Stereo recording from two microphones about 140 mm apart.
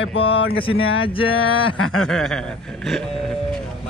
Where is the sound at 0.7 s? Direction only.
40° left (ahead or behind).